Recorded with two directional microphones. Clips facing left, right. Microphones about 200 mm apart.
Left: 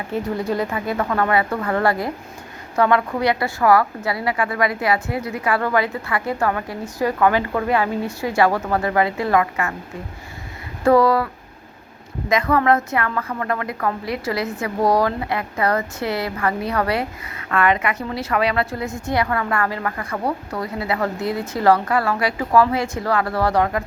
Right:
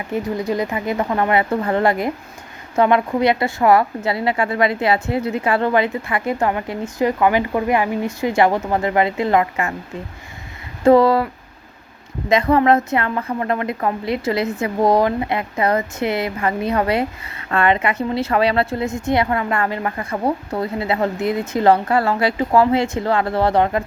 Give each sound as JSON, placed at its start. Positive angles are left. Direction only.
{"t": 0.1, "sound": "a woman's voice", "side_deg": -15}
{"t": 10.8, "sound": "a woman's voice", "side_deg": -25}
{"t": 12.3, "sound": "a woman's voice", "side_deg": -25}